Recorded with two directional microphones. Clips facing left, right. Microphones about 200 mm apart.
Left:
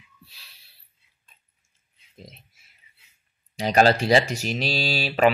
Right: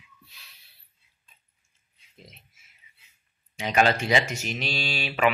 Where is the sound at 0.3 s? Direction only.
30° left (ahead or behind).